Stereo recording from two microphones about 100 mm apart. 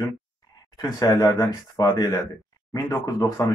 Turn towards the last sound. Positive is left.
turn(degrees=35)  # may be behind; listen again after turning